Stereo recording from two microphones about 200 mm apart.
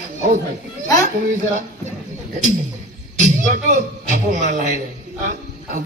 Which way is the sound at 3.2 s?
40° right (ahead or behind).